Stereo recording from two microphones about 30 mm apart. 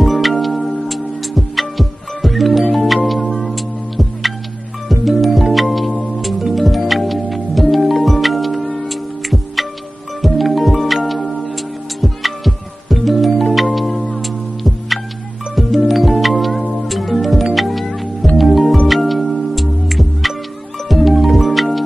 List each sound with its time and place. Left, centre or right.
0.0 s music: centre
17.8 s music: centre
18.4 s music: centre